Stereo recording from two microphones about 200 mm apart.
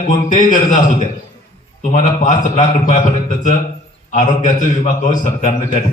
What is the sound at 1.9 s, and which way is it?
A man's voice, 35° left (ahead or behind).